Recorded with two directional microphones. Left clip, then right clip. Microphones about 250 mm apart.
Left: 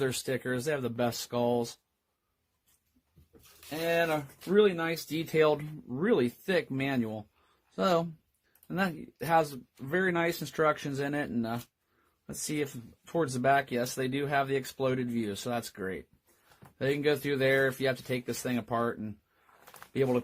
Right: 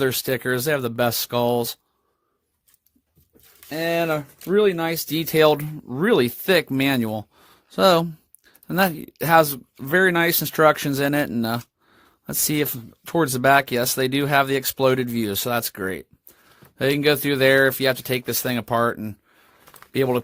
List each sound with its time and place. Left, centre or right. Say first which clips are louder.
0.0 s speech: right 9 dB; right
3.8 s speech: right 6 dB; right